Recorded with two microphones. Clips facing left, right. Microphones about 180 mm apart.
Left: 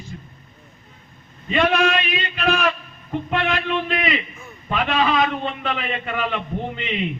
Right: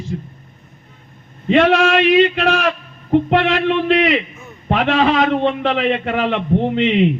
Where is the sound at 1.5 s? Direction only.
75° right (ahead or behind).